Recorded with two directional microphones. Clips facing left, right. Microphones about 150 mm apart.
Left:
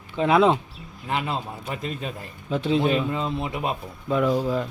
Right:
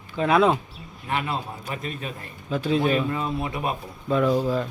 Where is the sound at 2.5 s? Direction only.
20° left (ahead or behind).